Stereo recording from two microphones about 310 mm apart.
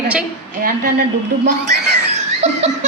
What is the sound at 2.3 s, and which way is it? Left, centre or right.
Laughter, right.